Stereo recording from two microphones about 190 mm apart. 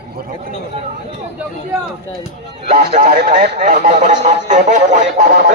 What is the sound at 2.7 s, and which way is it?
Speech, 40° right (ahead or behind).